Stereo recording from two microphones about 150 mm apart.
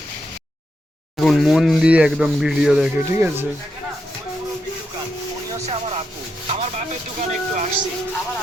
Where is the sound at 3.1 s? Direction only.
15° right (ahead or behind).